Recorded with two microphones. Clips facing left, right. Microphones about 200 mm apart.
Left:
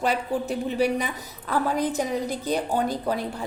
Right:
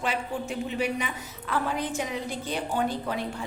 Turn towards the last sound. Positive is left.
turn(degrees=40)  # may be behind; listen again after turning